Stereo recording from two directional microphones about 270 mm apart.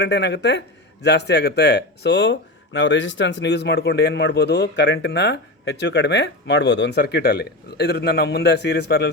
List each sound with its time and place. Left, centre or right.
0.0 s speech: left